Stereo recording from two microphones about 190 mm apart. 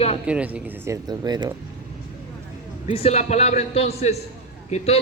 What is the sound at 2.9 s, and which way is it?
A man's voice, 35° left (ahead or behind).